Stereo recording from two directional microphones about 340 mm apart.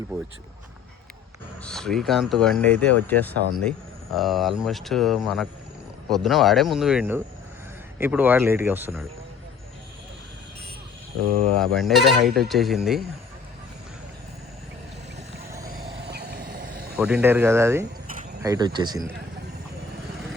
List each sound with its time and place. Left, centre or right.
1.6 s speech: centre
11.5 s speech: centre
15.6 s vehicle: right
17.0 s speech: centre